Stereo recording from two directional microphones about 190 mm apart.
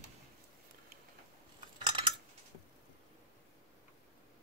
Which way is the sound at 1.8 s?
25° right (ahead or behind).